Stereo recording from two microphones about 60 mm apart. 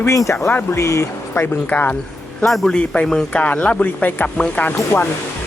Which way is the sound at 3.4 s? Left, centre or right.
Left.